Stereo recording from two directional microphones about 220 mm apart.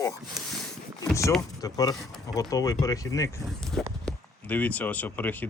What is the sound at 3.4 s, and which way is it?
Speech, centre (ahead or behind).